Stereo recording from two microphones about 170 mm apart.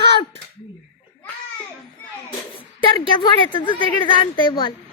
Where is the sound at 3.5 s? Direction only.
30° left (ahead or behind).